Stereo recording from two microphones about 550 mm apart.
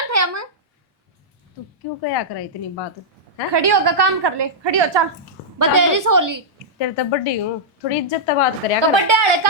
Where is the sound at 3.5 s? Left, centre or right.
Right.